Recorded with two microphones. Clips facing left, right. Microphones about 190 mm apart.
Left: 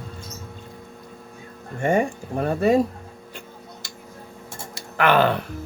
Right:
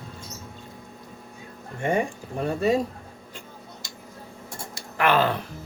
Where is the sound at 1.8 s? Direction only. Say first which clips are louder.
Left 4 dB; 50° left (ahead or behind).